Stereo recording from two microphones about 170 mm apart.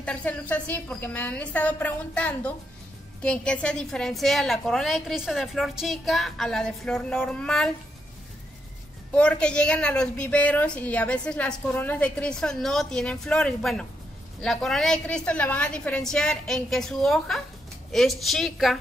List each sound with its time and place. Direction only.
0.0 s a woman's voice: 5° left (ahead or behind)
9.1 s a woman's voice: 5° left (ahead or behind)